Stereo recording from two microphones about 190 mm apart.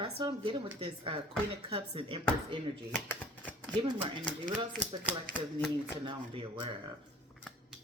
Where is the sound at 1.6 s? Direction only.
30° right (ahead or behind).